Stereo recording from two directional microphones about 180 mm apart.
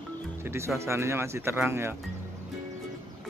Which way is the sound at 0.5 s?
15° right (ahead or behind).